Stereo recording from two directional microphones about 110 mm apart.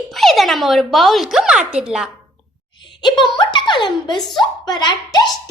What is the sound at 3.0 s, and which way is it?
A child's voice, 45° left (ahead or behind).